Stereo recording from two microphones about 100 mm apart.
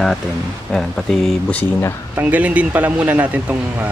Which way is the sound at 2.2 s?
15° right (ahead or behind).